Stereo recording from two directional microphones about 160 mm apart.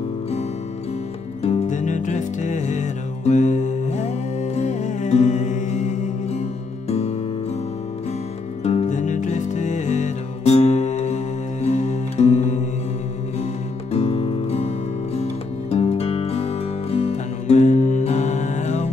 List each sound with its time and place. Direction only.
1.4 s music: 45° left (ahead or behind)
8.6 s music: 45° left (ahead or behind)
13.9 s music: 40° left (ahead or behind)
15.7 s music: 40° left (ahead or behind)